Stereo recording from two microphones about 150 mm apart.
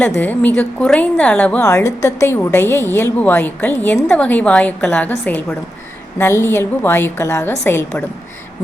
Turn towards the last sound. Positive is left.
turn(degrees=15)  # may be behind; listen again after turning